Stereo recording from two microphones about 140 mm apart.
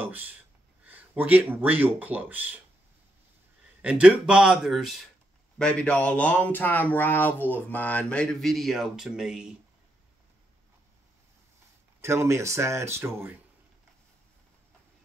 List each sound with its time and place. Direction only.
0.0 s gasp: 15° right (ahead or behind)
0.8 s speech: 10° right (ahead or behind)
3.8 s speech: 10° right (ahead or behind)
12.0 s speech: 20° right (ahead or behind)